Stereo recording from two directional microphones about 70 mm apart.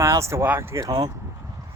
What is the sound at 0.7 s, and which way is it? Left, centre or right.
Speech, right.